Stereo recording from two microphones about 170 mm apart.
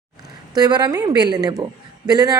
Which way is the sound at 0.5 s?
25° right (ahead or behind).